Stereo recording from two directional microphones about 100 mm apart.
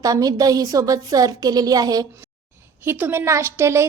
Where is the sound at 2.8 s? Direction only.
20° right (ahead or behind).